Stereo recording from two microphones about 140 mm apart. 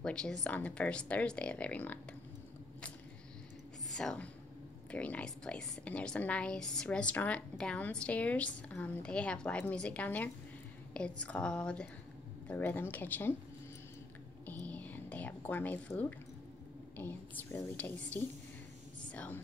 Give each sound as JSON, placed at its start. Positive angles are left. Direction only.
{"t": 0.0, "sound": "a woman's voice", "side_deg": 5}
{"t": 3.9, "sound": "a woman's voice", "side_deg": 5}
{"t": 14.4, "sound": "whispering", "side_deg": 10}
{"t": 16.9, "sound": "a woman's voice", "side_deg": 15}